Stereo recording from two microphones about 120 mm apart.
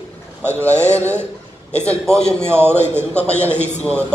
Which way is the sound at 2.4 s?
20° right (ahead or behind).